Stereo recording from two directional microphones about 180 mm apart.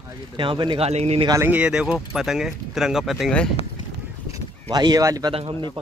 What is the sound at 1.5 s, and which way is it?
Speech, 5° right (ahead or behind).